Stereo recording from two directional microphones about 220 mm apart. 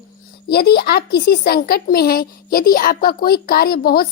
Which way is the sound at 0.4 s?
45° left (ahead or behind).